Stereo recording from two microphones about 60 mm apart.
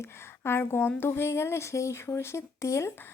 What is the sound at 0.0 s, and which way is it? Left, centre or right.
Speech, left.